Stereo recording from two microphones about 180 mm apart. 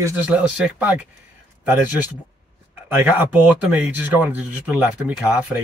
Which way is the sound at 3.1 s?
10° right (ahead or behind).